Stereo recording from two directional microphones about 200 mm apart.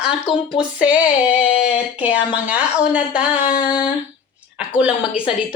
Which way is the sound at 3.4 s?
40° left (ahead or behind).